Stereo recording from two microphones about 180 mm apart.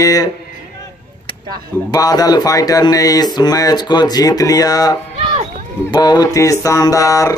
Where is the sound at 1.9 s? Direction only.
20° left (ahead or behind).